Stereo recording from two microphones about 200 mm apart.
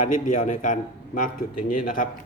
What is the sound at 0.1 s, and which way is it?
A man's voice, 40° left (ahead or behind).